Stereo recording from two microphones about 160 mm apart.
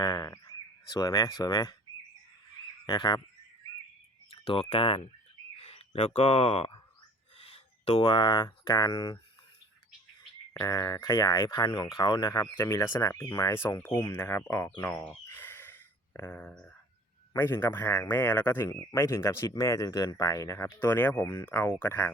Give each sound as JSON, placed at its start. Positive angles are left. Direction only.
{"t": 0.0, "sound": "speech", "side_deg": 20}
{"t": 2.8, "sound": "speech", "side_deg": 25}
{"t": 4.3, "sound": "a sound", "side_deg": 35}
{"t": 4.7, "sound": "speech", "side_deg": 35}
{"t": 10.6, "sound": "speech", "side_deg": 20}
{"t": 15.3, "sound": "a sound", "side_deg": 15}
{"t": 16.1, "sound": "speech", "side_deg": 15}